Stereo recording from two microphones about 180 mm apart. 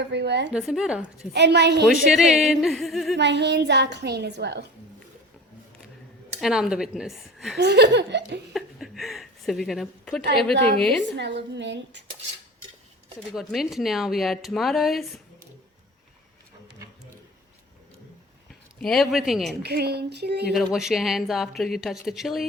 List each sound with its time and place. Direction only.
0.0 s a woman's voice: 70° right (ahead or behind)
0.5 s speech: 5° right (ahead or behind)
1.3 s a woman's voice: 70° right (ahead or behind)
1.9 s speech: centre (ahead or behind)
3.2 s a woman's voice: 70° right (ahead or behind)
6.4 s speech: 5° right (ahead or behind)
7.6 s a woman's voice: 70° right (ahead or behind)
8.5 s a sound: centre (ahead or behind)
10.3 s speech: centre (ahead or behind)
11.2 s a woman's voice: 70° right (ahead or behind)
13.1 s speech: centre (ahead or behind)
18.8 s speech: centre (ahead or behind)
19.6 s a sound: 65° right (ahead or behind)
20.5 s speech: centre (ahead or behind)